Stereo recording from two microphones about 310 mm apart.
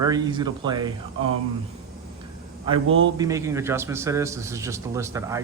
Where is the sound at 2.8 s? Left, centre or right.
Right.